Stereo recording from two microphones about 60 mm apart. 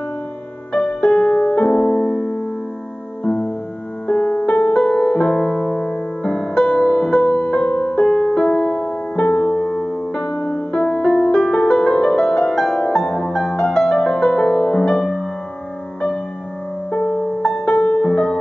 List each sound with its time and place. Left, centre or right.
0.7 s music: centre
4.8 s music: centre
9.2 s music: left
9.6 s music: centre
10.2 s music: left; by 15.2 s centre
16.9 s music: left
17.7 s music: left
18.0 s music: centre